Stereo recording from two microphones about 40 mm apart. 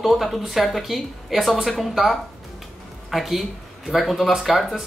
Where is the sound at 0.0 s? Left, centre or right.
Centre.